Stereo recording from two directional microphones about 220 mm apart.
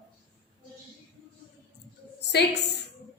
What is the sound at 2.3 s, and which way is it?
Speech, 50° left (ahead or behind).